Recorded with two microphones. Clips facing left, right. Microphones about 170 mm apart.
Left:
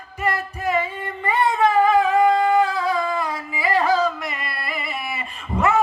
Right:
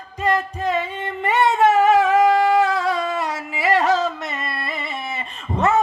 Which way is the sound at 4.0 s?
25° right (ahead or behind).